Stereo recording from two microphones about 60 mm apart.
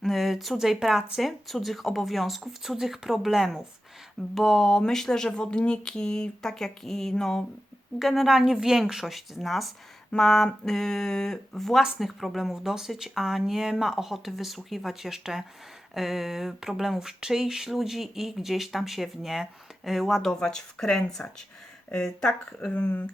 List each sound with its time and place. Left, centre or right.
0.0 s speech: centre
7.9 s speech: centre
20.2 s speech: centre